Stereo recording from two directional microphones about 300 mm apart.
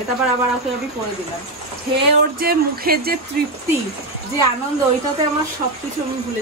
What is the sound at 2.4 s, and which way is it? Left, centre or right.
Speech, right.